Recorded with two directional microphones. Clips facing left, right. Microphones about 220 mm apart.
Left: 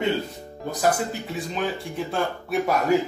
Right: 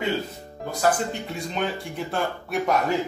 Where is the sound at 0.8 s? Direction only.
5° left (ahead or behind).